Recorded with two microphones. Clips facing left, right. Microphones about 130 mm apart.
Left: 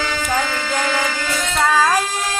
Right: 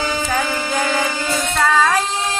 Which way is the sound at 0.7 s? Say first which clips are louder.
Right 1 dB; 20° right (ahead or behind).